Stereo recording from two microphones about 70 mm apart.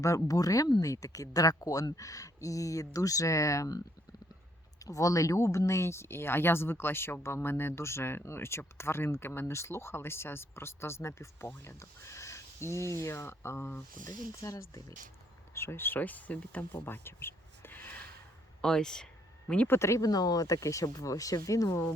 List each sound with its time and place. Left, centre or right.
0.0 s speech: left
4.9 s speech: left
14.4 s speech: left
18.6 s speech: centre
19.6 s speech: left
20.1 s speech: left